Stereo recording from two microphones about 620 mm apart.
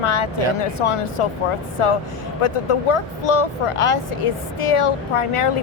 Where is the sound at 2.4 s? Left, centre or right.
Left.